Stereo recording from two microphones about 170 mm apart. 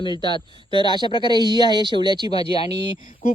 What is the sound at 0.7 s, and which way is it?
Speech, 25° right (ahead or behind).